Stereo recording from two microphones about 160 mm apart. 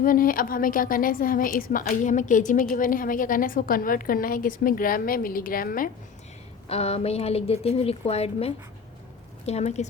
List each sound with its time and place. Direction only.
0.0 s a woman's voice: 60° left (ahead or behind)
6.7 s speech: 40° left (ahead or behind)